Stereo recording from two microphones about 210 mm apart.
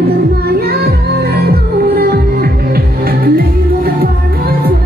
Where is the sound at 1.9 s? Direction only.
45° right (ahead or behind).